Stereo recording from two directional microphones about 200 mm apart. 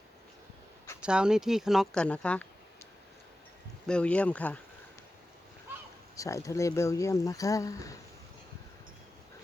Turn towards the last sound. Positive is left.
turn(degrees=15)  # may be behind; listen again after turning